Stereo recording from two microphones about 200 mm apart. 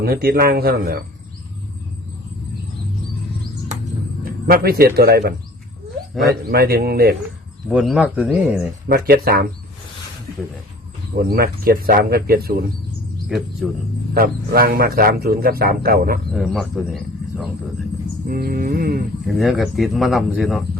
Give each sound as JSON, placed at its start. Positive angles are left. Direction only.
{"t": 0.0, "sound": "a man's voice", "side_deg": -50}
{"t": 4.2, "sound": "speech", "side_deg": -45}
{"t": 6.5, "sound": "a man's voice", "side_deg": -50}
{"t": 7.7, "sound": "speech", "side_deg": -5}
{"t": 8.9, "sound": "a man's voice", "side_deg": -45}
{"t": 11.3, "sound": "a man's voice", "side_deg": -50}
{"t": 13.2, "sound": "speech", "side_deg": 0}
{"t": 14.1, "sound": "a man's voice", "side_deg": -50}
{"t": 16.3, "sound": "speech", "side_deg": 0}
{"t": 18.3, "sound": "a man's voice", "side_deg": -45}
{"t": 19.2, "sound": "speech", "side_deg": 0}